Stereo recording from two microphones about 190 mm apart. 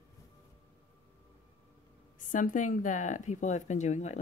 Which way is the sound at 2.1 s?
45° left (ahead or behind).